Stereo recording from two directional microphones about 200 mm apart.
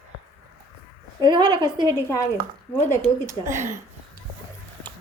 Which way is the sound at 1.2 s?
25° right (ahead or behind).